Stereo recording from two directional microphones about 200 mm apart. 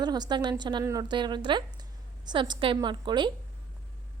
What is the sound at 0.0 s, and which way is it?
A woman's voice, 20° right (ahead or behind).